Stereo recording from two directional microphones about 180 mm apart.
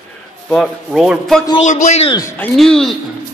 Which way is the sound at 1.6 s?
45° left (ahead or behind).